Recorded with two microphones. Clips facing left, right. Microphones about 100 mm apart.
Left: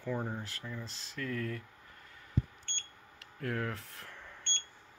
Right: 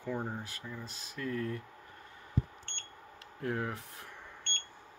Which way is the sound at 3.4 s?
20° right (ahead or behind).